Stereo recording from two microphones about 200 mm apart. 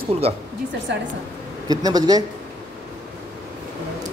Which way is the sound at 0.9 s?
60° right (ahead or behind).